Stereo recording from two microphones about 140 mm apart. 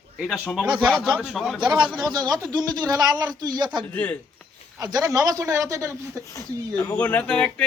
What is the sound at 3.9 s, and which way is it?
Speech, 10° left (ahead or behind).